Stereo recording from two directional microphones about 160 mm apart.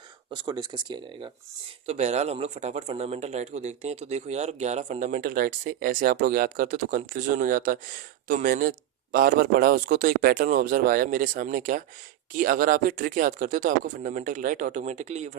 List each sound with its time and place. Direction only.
0.3 s speech: 25° right (ahead or behind)
1.9 s a man's voice: 40° right (ahead or behind)